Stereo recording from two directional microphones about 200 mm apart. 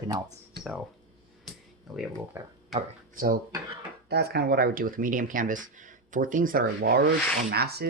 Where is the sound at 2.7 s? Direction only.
45° right (ahead or behind).